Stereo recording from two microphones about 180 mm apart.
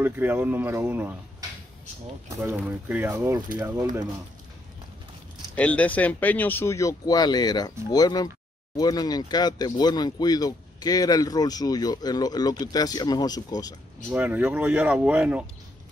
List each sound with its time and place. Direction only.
0.0 s speech: 10° right (ahead or behind)
2.2 s speech: 10° right (ahead or behind)
5.6 s speech: 10° left (ahead or behind)
14.1 s speech: 10° right (ahead or behind)